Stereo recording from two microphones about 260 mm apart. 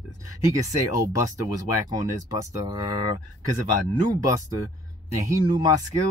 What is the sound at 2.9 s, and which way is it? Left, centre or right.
Speech, left.